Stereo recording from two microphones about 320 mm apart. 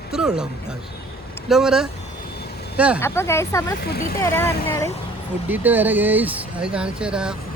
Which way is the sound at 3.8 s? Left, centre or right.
Left.